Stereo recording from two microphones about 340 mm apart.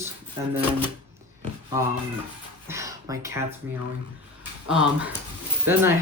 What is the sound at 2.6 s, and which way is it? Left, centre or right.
Speech, centre.